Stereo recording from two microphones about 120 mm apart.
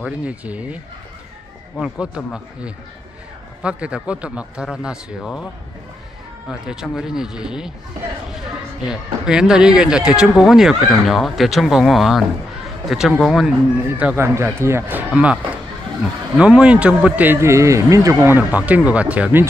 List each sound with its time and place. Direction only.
0.0 s speech: 10° right (ahead or behind)
1.8 s speech: 5° right (ahead or behind)
6.5 s speech: 5° right (ahead or behind)
13.9 s speech: 15° right (ahead or behind)
16.3 s speech: 10° right (ahead or behind)